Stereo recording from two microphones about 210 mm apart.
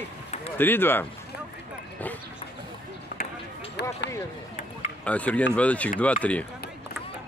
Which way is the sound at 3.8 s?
50° left (ahead or behind).